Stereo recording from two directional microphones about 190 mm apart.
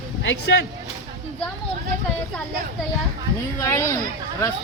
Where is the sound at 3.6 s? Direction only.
15° left (ahead or behind).